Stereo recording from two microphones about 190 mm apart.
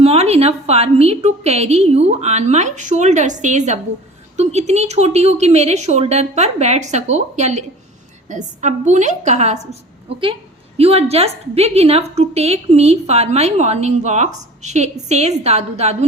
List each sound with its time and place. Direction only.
0.0 s a woman's voice: 30° right (ahead or behind)
10.8 s a woman's voice: 30° right (ahead or behind)